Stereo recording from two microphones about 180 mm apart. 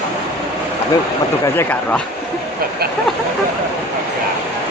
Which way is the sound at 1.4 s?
10° left (ahead or behind).